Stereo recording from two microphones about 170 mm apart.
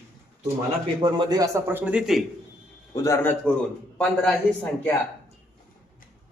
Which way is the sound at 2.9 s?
20° left (ahead or behind).